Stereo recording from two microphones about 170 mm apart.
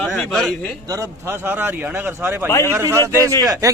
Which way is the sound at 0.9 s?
20° right (ahead or behind).